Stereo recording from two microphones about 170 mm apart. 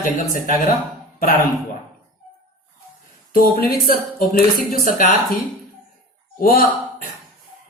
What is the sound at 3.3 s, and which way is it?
Speech, 60° left (ahead or behind).